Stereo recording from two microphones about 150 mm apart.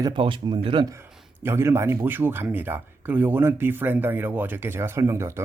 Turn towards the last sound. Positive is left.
turn(degrees=-20)  # may be behind; listen again after turning